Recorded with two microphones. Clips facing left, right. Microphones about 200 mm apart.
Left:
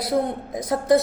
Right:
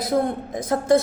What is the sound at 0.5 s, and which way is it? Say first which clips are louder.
Speech: even; 15° left (ahead or behind).